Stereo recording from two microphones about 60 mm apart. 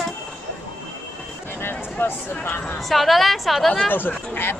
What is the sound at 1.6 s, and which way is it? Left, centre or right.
Speech, left.